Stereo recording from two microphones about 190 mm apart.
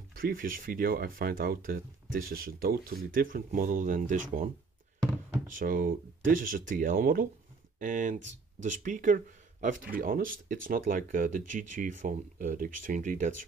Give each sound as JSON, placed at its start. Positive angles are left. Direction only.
{"t": 0.1, "sound": "speech", "side_deg": -50}
{"t": 5.5, "sound": "speech", "side_deg": -45}